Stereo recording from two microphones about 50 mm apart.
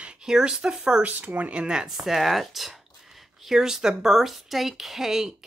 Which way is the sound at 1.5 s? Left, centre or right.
Centre.